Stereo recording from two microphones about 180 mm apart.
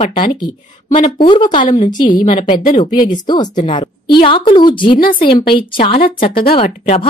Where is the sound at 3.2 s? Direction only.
25° left (ahead or behind).